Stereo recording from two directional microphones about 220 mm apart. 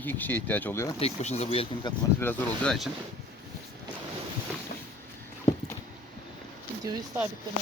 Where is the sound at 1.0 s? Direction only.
30° left (ahead or behind).